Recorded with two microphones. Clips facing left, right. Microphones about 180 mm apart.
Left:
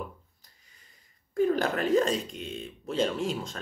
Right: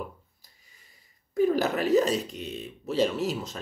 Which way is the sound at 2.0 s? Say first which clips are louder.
Right 2 dB; 5° right (ahead or behind).